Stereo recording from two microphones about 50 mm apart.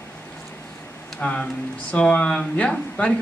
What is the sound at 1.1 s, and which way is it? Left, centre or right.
Speech, left.